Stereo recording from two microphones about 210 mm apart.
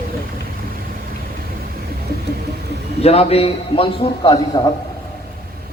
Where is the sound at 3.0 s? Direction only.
30° left (ahead or behind).